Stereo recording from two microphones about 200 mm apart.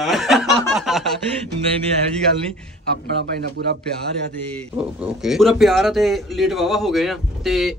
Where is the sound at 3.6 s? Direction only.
60° right (ahead or behind).